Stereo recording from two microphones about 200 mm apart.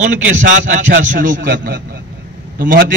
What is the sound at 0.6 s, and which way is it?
A man's voice, 40° right (ahead or behind).